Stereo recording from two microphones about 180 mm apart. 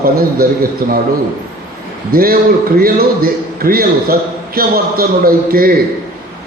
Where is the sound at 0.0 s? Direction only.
55° right (ahead or behind).